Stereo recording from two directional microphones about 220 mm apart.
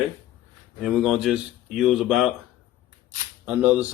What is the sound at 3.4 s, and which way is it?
Speech, 5° right (ahead or behind).